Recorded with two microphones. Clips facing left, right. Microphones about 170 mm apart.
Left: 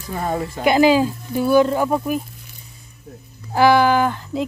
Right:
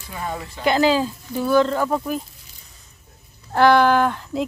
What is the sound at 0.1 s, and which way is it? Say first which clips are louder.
Speech: left 6 dB; 45° left (ahead or behind).